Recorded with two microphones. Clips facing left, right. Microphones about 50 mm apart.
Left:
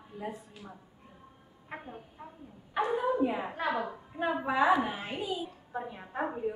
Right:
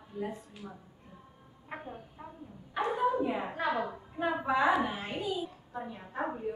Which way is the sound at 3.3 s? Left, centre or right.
Centre.